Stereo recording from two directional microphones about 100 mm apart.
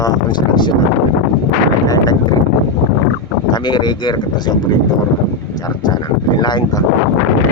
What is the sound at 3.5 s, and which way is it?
Speech, 50° left (ahead or behind).